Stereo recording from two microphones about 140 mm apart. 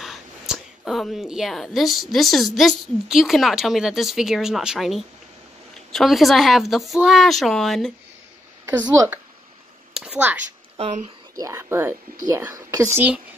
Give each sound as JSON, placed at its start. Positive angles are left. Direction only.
{"t": 0.0, "sound": "speech", "side_deg": 0}
{"t": 8.8, "sound": "speech", "side_deg": -25}
{"t": 9.9, "sound": "speech", "side_deg": -5}
{"t": 10.4, "sound": "a woman's voice", "side_deg": -55}
{"t": 11.3, "sound": "speech", "side_deg": -20}